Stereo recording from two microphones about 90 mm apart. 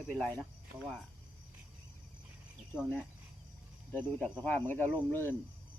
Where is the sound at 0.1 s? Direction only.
15° left (ahead or behind).